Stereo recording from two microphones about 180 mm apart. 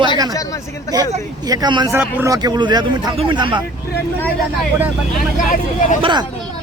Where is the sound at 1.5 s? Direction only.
25° right (ahead or behind).